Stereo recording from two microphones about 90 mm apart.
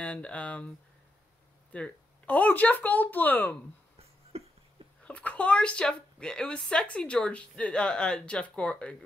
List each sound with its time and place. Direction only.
0.0 s a woman's voice: 15° left (ahead or behind)
1.7 s speech: 15° left (ahead or behind)
4.0 s a sound: 90° right
5.0 s a woman's voice: 15° left (ahead or behind)